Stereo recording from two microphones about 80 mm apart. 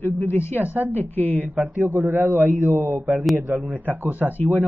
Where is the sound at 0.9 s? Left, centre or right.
Left.